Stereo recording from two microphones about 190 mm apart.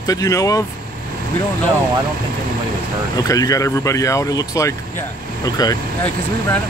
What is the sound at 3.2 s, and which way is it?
Speech, 20° left (ahead or behind).